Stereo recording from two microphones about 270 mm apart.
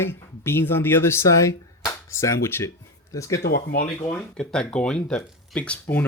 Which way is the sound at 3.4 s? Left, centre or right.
Left.